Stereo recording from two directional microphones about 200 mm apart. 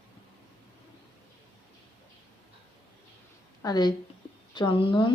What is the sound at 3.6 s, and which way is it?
Speech, 20° left (ahead or behind).